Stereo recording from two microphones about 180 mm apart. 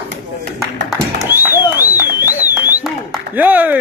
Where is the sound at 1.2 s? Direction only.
10° right (ahead or behind).